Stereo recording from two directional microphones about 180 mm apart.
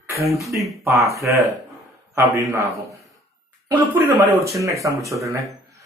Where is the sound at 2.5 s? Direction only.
15° right (ahead or behind).